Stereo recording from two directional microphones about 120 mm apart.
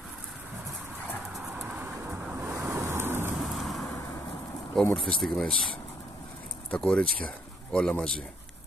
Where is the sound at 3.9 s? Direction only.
20° left (ahead or behind).